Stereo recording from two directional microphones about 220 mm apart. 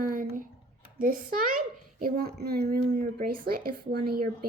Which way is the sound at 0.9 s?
40° right (ahead or behind).